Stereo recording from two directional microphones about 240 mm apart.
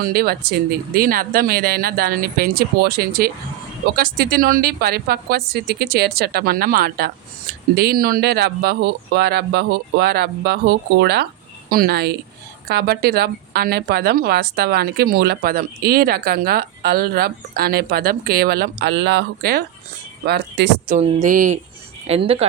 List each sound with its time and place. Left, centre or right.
0.0 s speech: right
20.9 s speech: right